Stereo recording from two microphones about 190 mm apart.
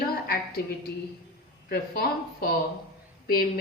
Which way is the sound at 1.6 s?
55° left (ahead or behind).